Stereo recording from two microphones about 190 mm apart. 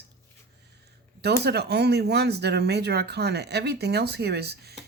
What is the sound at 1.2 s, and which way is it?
Speech, 60° right (ahead or behind).